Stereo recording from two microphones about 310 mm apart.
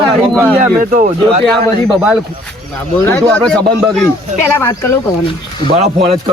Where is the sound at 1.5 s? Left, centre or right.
Centre.